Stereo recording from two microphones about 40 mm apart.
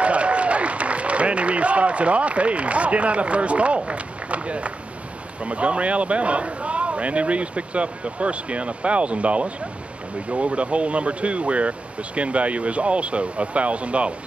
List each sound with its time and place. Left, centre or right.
0.0 s applause: right
5.4 s speech: right